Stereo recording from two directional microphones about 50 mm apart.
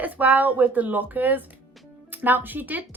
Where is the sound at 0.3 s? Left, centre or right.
Right.